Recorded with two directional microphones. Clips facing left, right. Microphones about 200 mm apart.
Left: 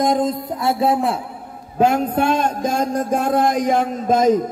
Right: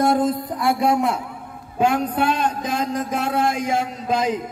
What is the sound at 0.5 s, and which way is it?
A man's voice, 25° left (ahead or behind).